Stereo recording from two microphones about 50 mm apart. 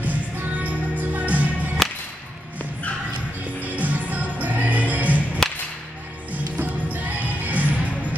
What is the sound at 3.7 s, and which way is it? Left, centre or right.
Music, right.